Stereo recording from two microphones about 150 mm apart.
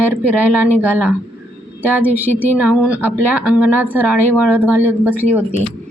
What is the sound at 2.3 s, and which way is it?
Speech, 15° left (ahead or behind).